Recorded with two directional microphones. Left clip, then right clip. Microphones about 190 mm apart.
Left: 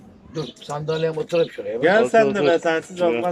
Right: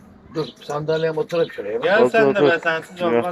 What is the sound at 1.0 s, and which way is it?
Speech, 5° left (ahead or behind).